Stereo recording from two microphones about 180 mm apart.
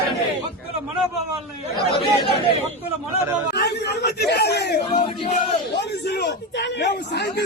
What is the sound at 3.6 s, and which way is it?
Speech, 65° left (ahead or behind).